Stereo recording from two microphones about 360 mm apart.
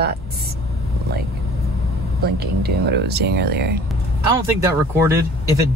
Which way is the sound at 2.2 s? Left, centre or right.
Right.